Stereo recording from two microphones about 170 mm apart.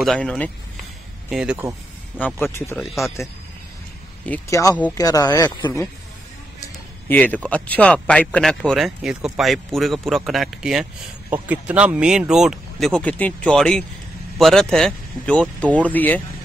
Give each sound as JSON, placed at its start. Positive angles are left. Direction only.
{"t": 0.0, "sound": "speech", "side_deg": 5}
{"t": 1.3, "sound": "speech", "side_deg": -5}
{"t": 2.1, "sound": "speech", "side_deg": 10}
{"t": 2.8, "sound": "speech", "side_deg": 0}
{"t": 4.3, "sound": "speech", "side_deg": 20}